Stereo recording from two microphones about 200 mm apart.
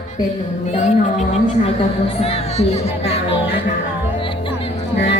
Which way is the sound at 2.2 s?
30° left (ahead or behind).